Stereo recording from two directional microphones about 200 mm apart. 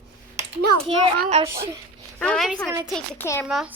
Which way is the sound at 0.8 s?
30° right (ahead or behind).